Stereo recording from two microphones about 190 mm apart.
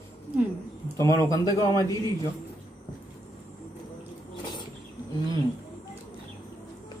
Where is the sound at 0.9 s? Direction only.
15° left (ahead or behind).